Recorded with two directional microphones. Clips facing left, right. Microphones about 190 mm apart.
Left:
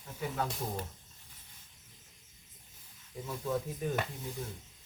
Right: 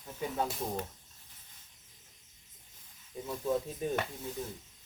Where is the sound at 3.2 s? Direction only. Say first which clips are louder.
Right 2 dB; 20° right (ahead or behind).